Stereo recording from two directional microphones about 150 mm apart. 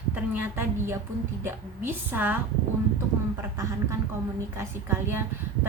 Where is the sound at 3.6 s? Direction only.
20° right (ahead or behind).